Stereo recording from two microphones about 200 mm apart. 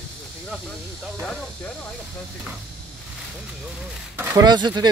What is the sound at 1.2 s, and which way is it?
Speech, 5° left (ahead or behind).